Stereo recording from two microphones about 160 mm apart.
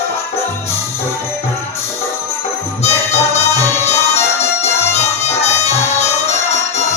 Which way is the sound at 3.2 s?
15° left (ahead or behind).